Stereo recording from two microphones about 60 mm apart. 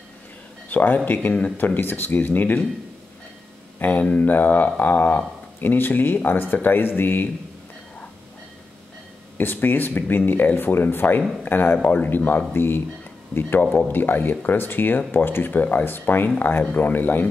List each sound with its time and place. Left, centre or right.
0.7 s speech: left
3.8 s speech: left
9.4 s speech: left